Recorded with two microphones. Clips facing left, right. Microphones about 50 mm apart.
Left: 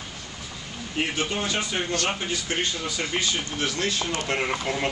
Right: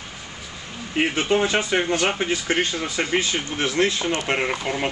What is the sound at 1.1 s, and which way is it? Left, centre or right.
Speech, right.